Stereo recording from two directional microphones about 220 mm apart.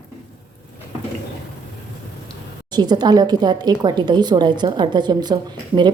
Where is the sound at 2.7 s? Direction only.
20° right (ahead or behind).